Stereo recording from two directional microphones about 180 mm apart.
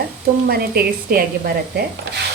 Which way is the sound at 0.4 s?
55° right (ahead or behind).